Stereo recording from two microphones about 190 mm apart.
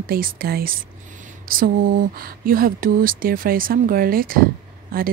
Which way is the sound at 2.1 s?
50° right (ahead or behind).